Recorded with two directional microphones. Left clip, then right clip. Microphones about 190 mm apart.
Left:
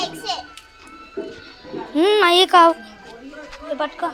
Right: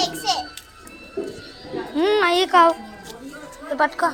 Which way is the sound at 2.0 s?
45° left (ahead or behind).